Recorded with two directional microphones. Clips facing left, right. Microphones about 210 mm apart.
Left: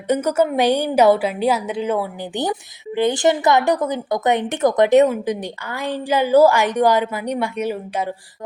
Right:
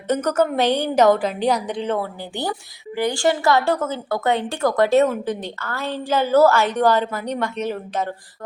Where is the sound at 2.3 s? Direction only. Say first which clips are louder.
Left 4 dB; 20° left (ahead or behind).